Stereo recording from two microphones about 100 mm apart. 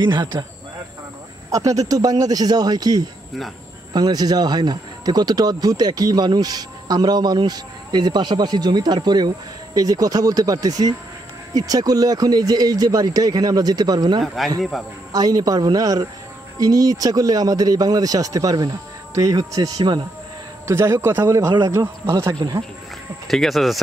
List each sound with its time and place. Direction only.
0.0 s speech: 50° right (ahead or behind)
1.5 s speech: 35° right (ahead or behind)
14.2 s speech: centre (ahead or behind)
15.1 s speech: 40° right (ahead or behind)
20.6 s speech: 30° right (ahead or behind)
21.4 s speech: 40° right (ahead or behind)
23.2 s speech: centre (ahead or behind)